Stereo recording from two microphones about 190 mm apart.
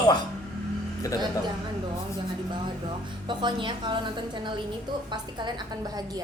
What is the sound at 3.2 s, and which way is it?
A woman's voice, 25° right (ahead or behind).